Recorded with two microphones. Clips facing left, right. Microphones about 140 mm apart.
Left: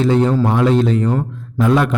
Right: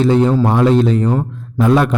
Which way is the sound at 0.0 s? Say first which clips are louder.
Right 2 dB; 35° right (ahead or behind).